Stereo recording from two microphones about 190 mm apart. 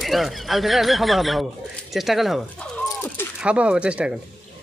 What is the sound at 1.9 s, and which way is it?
Dog, centre (ahead or behind).